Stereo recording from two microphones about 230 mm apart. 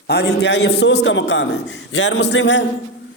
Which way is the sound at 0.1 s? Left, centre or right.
Left.